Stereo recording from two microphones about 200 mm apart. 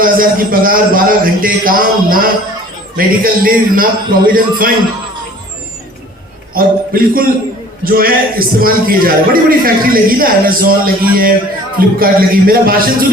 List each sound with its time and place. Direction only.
0.0 s a man's voice: 45° right (ahead or behind)
6.5 s a man's voice: 45° right (ahead or behind)